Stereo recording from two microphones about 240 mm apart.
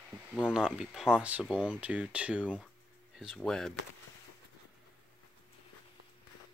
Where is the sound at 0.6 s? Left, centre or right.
Centre.